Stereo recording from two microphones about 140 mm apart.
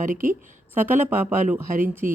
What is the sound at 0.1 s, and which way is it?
Speech, 75° right (ahead or behind).